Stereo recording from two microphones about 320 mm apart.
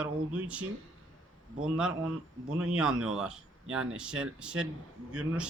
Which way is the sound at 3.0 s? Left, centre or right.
Centre.